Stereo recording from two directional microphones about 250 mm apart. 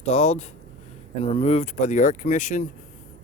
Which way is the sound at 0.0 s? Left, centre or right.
Left.